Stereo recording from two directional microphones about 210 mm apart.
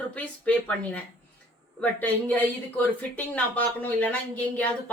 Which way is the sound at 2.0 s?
10° left (ahead or behind).